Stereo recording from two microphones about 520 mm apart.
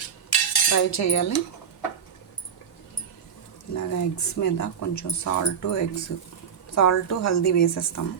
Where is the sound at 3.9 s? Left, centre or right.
Left.